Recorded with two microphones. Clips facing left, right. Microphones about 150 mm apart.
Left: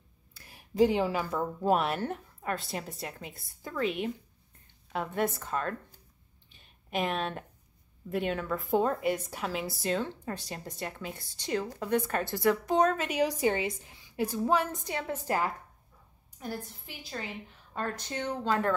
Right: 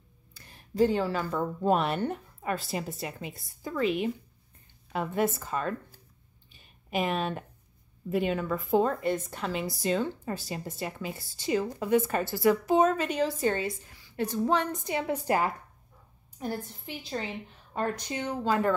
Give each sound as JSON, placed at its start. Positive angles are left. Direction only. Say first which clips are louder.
{"t": 0.3, "sound": "speech", "louder": "right 2 dB", "side_deg": 5}
{"t": 6.5, "sound": "a sound", "louder": "right 2 dB", "side_deg": -5}
{"t": 8.1, "sound": "speech", "louder": "right 3 dB", "side_deg": 0}
{"t": 13.2, "sound": "a woman's voice", "louder": "left 3 dB", "side_deg": 15}
{"t": 14.1, "sound": "a woman's voice", "louder": "right 1 dB", "side_deg": 10}
{"t": 15.0, "sound": "a woman's voice", "louder": "right 3 dB", "side_deg": -15}